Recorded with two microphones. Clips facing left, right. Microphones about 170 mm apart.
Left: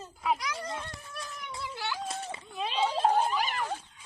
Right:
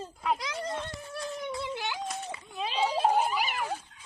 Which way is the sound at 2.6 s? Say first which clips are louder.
Even; 5° right (ahead or behind).